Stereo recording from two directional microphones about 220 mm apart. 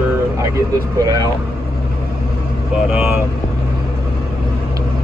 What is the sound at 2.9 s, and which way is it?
Speech, 10° right (ahead or behind).